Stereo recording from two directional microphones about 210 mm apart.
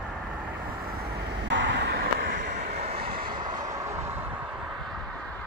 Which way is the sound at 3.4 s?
15° right (ahead or behind).